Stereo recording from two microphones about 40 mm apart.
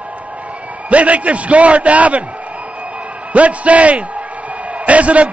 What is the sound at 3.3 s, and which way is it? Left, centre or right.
A man's voice, right.